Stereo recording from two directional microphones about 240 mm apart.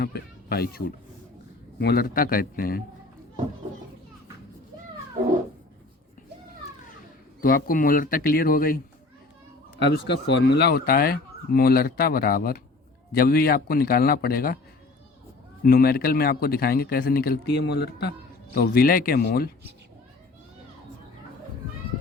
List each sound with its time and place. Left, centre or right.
0.0 s speech: left
7.4 s speech: left
9.8 s speech: left
15.6 s speech: left